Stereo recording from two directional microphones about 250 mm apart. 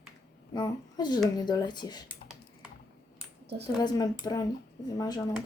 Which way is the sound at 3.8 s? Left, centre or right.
Centre.